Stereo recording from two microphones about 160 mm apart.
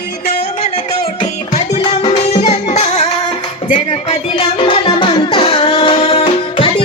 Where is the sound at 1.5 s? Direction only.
40° left (ahead or behind).